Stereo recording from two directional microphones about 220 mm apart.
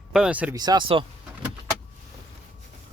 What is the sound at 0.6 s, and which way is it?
Speech, 20° right (ahead or behind).